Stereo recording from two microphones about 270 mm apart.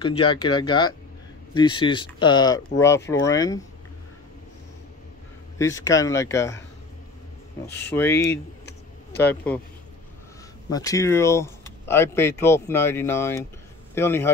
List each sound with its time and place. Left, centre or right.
0.0 s speech: centre
5.6 s speech: centre
7.7 s speech: centre
10.7 s speech: centre